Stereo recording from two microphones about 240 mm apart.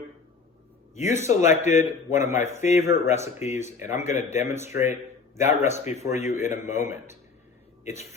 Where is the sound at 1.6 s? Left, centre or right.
Left.